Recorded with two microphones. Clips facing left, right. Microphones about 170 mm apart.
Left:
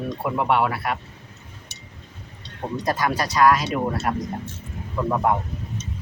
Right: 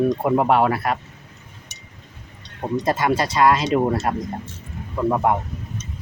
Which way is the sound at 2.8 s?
25° right (ahead or behind).